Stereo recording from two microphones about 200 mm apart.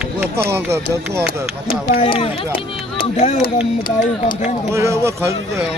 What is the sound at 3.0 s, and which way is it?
Speech, 35° left (ahead or behind).